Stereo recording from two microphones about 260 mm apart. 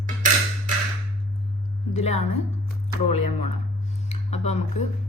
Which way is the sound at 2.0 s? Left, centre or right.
Left.